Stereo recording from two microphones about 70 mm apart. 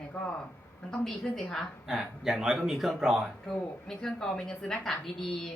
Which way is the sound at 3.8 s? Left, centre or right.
Centre.